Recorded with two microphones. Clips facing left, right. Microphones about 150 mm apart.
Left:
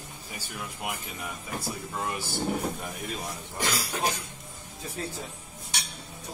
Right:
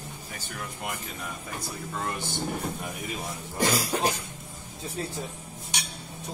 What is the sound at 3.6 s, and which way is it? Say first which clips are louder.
Cough: right 6 dB; 40° right (ahead or behind).